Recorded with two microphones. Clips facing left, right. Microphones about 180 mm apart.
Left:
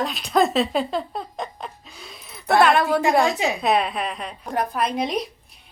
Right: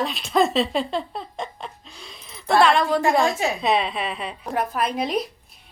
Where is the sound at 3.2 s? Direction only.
15° left (ahead or behind).